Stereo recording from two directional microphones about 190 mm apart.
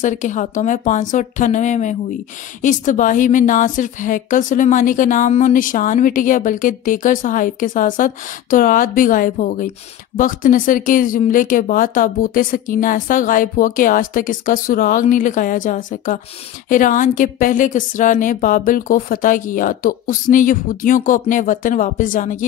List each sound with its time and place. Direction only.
0.0 s a woman's voice: 40° left (ahead or behind)